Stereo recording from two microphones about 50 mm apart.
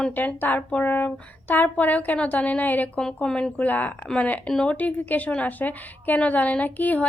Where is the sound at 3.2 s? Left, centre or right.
Centre.